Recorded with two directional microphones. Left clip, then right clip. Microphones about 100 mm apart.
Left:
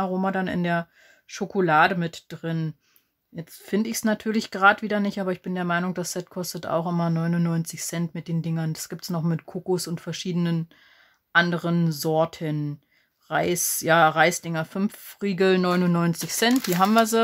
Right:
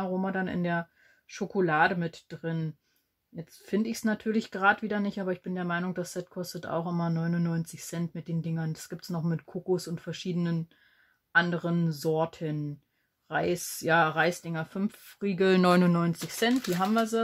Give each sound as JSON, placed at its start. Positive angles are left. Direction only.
{"t": 0.0, "sound": "speech", "side_deg": 20}
{"t": 15.5, "sound": "speech", "side_deg": -20}
{"t": 16.3, "sound": "speech", "side_deg": 25}
{"t": 16.8, "sound": "speech", "side_deg": 40}